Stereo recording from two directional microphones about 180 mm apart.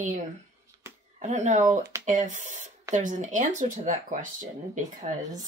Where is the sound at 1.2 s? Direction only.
40° right (ahead or behind).